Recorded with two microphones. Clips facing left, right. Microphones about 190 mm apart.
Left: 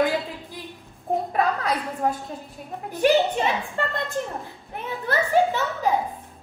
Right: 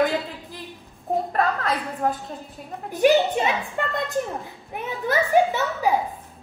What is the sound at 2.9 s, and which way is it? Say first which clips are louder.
A woman's voice: right 2 dB; 15° right (ahead or behind).